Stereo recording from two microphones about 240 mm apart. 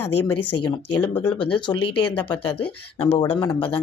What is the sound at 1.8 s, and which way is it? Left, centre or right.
Speech, left.